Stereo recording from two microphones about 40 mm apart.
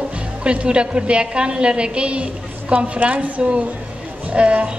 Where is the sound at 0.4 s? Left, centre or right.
Right.